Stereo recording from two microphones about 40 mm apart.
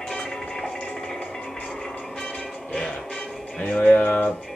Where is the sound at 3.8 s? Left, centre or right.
Left.